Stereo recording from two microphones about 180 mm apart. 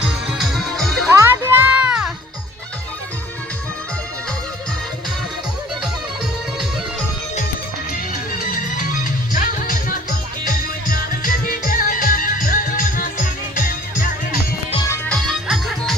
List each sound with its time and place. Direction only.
0.0 s music: centre (ahead or behind)
1.1 s music: 15° right (ahead or behind)
8.4 s music: 50° left (ahead or behind)
14.8 s music: 5° left (ahead or behind)